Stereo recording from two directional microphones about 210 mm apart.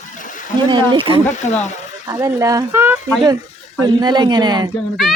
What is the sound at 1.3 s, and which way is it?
Speech, 35° left (ahead or behind).